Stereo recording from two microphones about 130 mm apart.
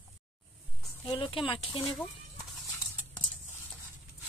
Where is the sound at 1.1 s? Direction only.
40° left (ahead or behind).